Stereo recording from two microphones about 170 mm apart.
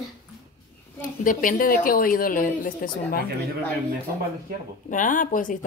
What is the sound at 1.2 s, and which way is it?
A woman's voice, 50° left (ahead or behind).